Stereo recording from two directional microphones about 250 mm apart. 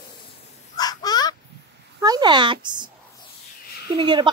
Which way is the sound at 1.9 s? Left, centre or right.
Centre.